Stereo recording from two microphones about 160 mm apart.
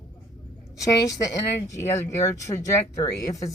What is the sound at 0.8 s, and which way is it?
Speech, 20° left (ahead or behind).